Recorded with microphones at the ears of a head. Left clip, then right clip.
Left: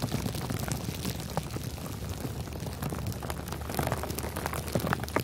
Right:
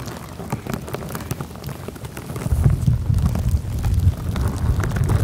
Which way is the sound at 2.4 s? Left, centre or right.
Right.